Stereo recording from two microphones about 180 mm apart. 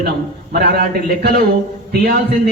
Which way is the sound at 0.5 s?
60° right (ahead or behind).